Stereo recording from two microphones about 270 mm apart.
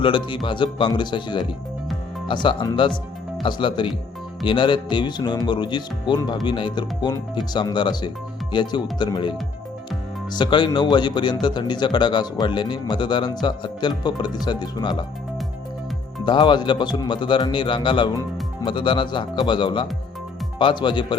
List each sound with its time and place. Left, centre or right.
0.0 s speech: centre
10.3 s speech: centre
16.2 s speech: centre